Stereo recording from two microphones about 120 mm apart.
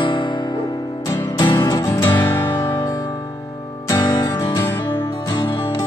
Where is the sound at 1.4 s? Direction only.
40° left (ahead or behind).